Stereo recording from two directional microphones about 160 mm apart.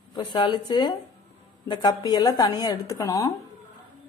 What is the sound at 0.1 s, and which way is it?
Speech, 25° left (ahead or behind).